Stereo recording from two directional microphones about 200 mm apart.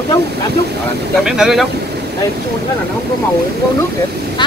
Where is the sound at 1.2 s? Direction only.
Centre (ahead or behind).